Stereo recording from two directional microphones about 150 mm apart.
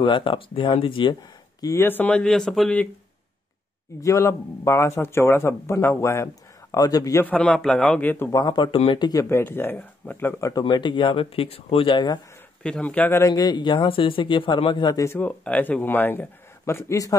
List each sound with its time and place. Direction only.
0.0 s speech: 35° left (ahead or behind)
1.6 s a man's voice: 20° left (ahead or behind)
4.0 s a man's voice: 20° left (ahead or behind)
7.2 s a man's voice: 5° left (ahead or behind)
8.3 s a man's voice: 30° left (ahead or behind)
10.5 s speech: 30° left (ahead or behind)
12.6 s a man's voice: 5° left (ahead or behind)
13.3 s speech: 25° left (ahead or behind)
15.0 s a man's voice: 10° left (ahead or behind)